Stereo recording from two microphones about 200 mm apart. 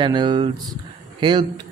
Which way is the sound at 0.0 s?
25° right (ahead or behind).